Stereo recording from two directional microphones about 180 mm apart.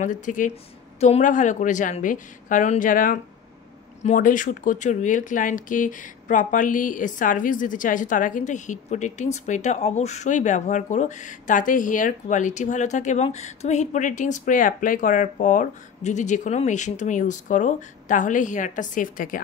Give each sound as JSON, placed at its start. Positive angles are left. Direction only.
{"t": 0.0, "sound": "speech", "side_deg": 45}